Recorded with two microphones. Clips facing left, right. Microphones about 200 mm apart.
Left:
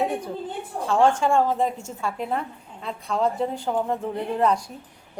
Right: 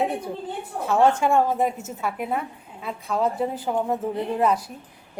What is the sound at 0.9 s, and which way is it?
A woman's voice, 5° right (ahead or behind).